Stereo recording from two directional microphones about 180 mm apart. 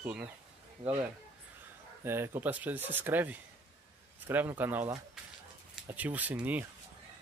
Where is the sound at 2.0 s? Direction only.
10° right (ahead or behind).